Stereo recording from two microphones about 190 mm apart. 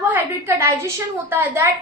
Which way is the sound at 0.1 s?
15° right (ahead or behind).